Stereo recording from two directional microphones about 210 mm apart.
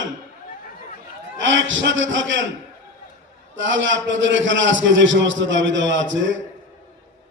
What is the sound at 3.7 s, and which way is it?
A man's voice, 60° right (ahead or behind).